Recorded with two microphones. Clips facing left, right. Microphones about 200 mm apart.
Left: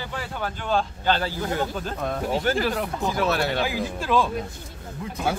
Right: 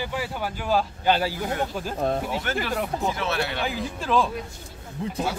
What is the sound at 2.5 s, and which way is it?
Speech, 35° left (ahead or behind).